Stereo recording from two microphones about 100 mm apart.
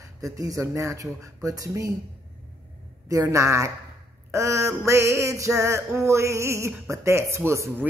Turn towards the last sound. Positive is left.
turn(degrees=-25)  # may be behind; listen again after turning